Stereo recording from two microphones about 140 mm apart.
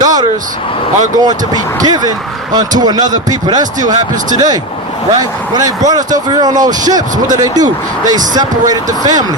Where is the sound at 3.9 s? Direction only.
65° right (ahead or behind).